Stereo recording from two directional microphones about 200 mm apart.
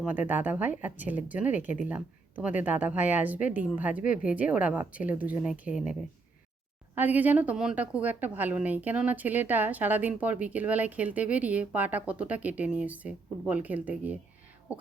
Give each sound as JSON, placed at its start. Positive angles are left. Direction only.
{"t": 0.0, "sound": "a woman's voice", "side_deg": -10}